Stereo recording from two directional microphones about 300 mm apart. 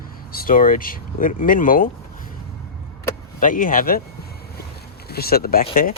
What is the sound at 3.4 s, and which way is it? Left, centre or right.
Speech, left.